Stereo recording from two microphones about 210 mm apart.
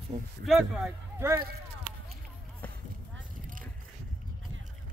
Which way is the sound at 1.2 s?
15° right (ahead or behind).